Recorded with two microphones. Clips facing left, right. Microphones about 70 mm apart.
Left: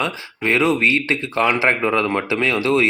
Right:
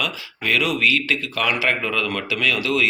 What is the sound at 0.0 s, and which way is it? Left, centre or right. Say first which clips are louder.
Speech: left 4 dB; left.